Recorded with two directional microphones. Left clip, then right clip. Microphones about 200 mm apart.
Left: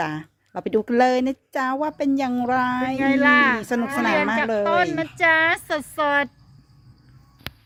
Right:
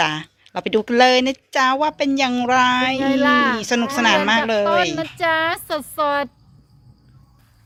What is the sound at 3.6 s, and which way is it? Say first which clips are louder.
Speech: right 4 dB; 15° left (ahead or behind).